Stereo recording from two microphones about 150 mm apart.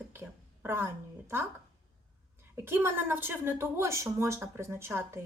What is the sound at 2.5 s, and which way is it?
A woman's voice, 15° right (ahead or behind).